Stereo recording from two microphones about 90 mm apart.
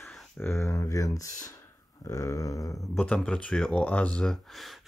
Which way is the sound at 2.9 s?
10° left (ahead or behind).